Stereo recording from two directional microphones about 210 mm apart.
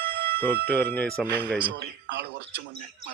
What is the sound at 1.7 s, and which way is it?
Speech, 55° right (ahead or behind).